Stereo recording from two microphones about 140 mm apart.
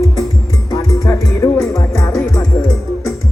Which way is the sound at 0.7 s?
20° left (ahead or behind).